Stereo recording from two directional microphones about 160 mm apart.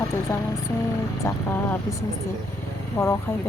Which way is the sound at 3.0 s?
10° left (ahead or behind).